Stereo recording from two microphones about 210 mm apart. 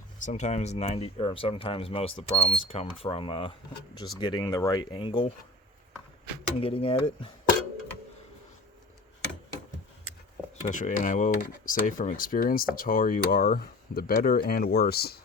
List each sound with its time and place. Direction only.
0.2 s speech: 35° left (ahead or behind)
6.6 s speech: 25° left (ahead or behind)
10.7 s speech: 40° left (ahead or behind)